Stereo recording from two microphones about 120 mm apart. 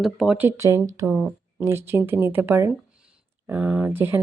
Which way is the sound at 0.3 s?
20° right (ahead or behind).